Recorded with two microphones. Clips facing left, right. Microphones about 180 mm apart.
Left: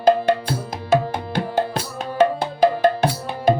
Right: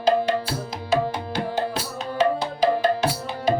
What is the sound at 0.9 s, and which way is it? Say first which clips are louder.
Tabla: left 3 dB; 50° left (ahead or behind).